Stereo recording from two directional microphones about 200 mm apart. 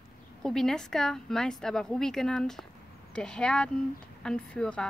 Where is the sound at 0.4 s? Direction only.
Centre (ahead or behind).